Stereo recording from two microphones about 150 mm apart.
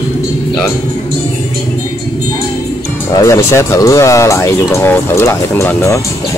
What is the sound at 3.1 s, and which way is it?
Speech, 20° left (ahead or behind).